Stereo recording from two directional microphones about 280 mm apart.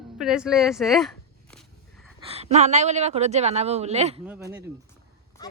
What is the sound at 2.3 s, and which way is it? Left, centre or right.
Speech, right.